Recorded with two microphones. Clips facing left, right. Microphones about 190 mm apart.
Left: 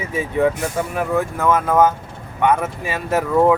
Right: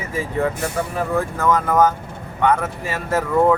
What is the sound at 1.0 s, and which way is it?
Speech, 15° left (ahead or behind).